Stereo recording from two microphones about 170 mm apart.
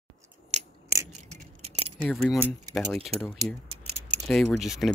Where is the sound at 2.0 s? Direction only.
Centre (ahead or behind).